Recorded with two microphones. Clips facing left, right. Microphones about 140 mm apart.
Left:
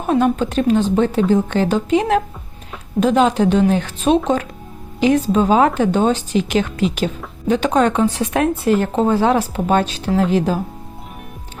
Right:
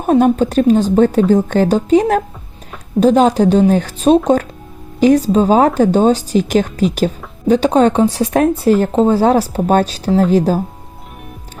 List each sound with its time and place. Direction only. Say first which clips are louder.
0.0 s speech: right 5 dB; 45° right (ahead or behind)